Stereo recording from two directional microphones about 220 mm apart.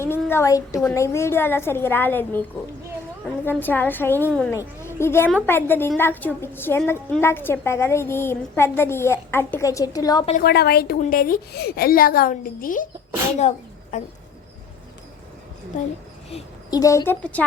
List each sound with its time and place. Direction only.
0.0 s a woman's voice: 10° left (ahead or behind)
3.4 s a woman's voice: 10° left (ahead or behind)
10.3 s a woman's voice: 45° left (ahead or behind)
16.3 s a woman's voice: 15° left (ahead or behind)